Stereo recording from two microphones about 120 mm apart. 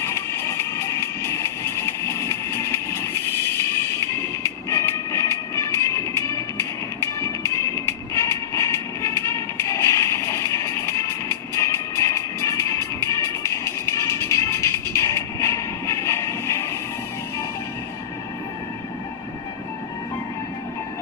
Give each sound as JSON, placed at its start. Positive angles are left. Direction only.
{"t": 0.0, "sound": "music", "side_deg": 20}